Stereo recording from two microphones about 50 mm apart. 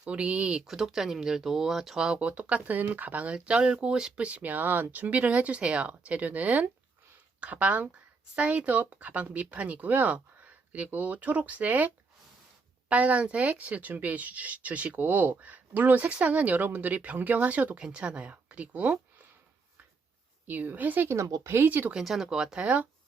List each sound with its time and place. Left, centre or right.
0.0 s speech: right
0.6 s speech: centre
2.2 s speech: right
3.3 s speech: right
4.2 s speech: right
12.9 s speech: right
20.5 s speech: right
21.1 s speech: right
21.5 s speech: right
22.0 s speech: centre
22.6 s speech: right